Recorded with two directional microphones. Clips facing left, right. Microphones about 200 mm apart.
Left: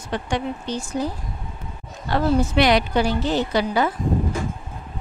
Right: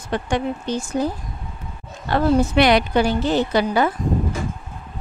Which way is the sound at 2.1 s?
55° right (ahead or behind).